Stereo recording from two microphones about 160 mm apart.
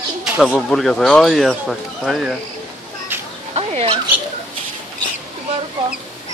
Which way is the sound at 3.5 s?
35° right (ahead or behind).